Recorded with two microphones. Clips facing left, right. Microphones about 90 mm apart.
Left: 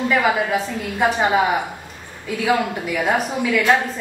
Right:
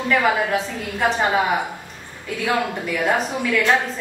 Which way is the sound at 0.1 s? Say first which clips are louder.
Right 2 dB; 5° left (ahead or behind).